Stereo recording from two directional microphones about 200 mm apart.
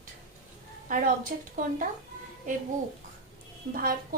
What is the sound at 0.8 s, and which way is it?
A woman's voice, 45° right (ahead or behind).